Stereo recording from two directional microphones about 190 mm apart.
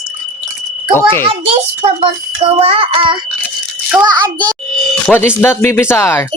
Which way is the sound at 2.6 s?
30° right (ahead or behind).